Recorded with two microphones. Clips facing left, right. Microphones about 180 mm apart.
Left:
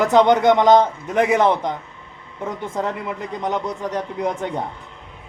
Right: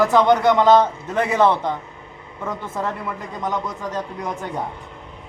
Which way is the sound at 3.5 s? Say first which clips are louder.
Left 2 dB; 65° left (ahead or behind).